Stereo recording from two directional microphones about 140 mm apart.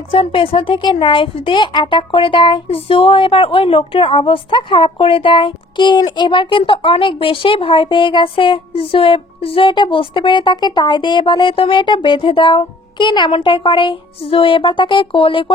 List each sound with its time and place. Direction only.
0.1 s speech: 40° left (ahead or behind)